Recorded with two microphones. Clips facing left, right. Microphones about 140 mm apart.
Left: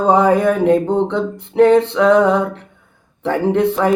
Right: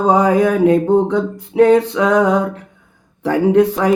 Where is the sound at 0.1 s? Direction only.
5° right (ahead or behind).